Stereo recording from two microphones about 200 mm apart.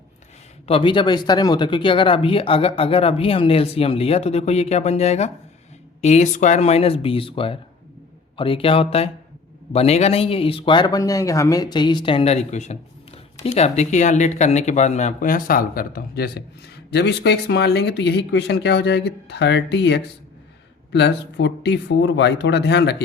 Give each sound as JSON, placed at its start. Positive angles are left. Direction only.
{"t": 0.7, "sound": "speech", "side_deg": 25}